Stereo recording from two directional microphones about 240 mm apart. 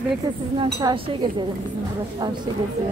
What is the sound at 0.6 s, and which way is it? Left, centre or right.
Speech, centre.